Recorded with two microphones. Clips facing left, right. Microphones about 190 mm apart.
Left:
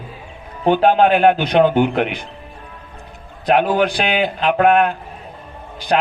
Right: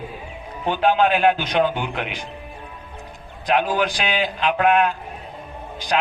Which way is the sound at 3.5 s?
60° left (ahead or behind).